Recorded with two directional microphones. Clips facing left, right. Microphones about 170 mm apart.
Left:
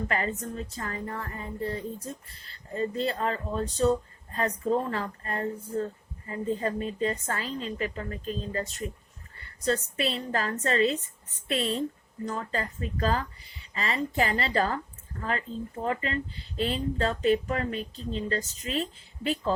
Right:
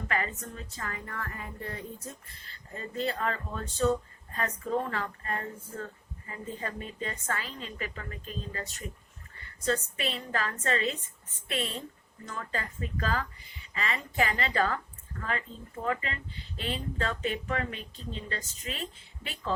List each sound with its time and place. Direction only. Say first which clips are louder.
0.1 s speech: left 3 dB; 35° left (ahead or behind)